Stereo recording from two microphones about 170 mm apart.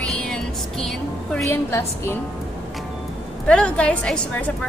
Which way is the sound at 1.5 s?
15° left (ahead or behind).